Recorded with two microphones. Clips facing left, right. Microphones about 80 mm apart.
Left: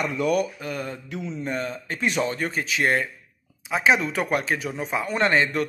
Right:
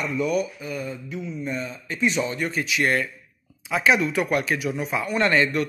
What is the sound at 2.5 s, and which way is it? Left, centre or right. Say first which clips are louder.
Speech: even; left.